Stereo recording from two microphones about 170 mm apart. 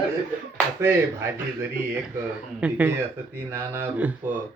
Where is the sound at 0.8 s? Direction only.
15° right (ahead or behind).